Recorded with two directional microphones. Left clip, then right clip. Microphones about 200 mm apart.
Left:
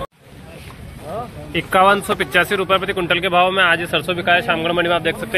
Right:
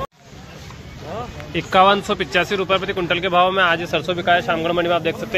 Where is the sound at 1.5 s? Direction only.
5° right (ahead or behind).